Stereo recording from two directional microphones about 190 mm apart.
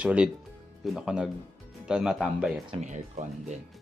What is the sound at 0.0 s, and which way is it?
Speech, 5° right (ahead or behind).